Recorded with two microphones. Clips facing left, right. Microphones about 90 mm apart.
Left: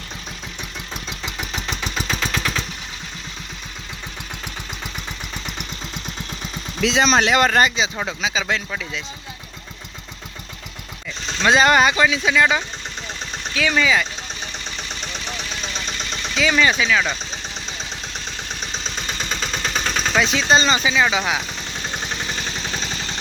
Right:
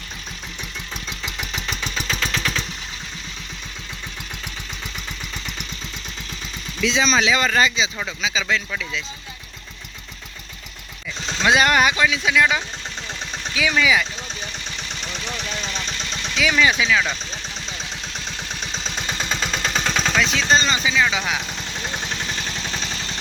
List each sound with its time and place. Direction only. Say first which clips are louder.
1.4 s engine: left 1 dB; 20° left (ahead or behind)
6.8 s speech: left 2 dB; 70° left (ahead or behind); by 9.0 s 45° left (ahead or behind)
11.3 s speech: left 2 dB; 5° right (ahead or behind)
13.7 s speech: even; centre (ahead or behind)
16.3 s speech: left 1 dB; centre (ahead or behind)
19.5 s vehicle: even; centre (ahead or behind)
21.0 s speech: left 2 dB; 15° left (ahead or behind)